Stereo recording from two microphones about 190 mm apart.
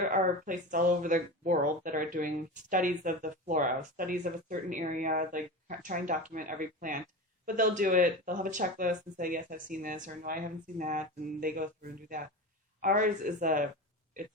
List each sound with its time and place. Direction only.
0.1 s speech: 40° right (ahead or behind)